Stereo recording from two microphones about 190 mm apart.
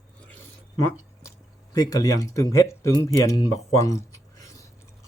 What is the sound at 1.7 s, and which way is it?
Speech, 20° left (ahead or behind).